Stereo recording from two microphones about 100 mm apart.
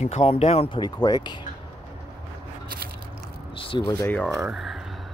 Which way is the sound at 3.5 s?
60° left (ahead or behind).